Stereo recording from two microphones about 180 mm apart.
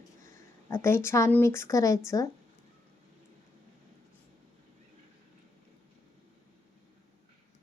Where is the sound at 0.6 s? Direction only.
15° left (ahead or behind).